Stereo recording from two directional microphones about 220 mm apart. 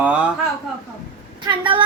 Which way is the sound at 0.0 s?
5° right (ahead or behind).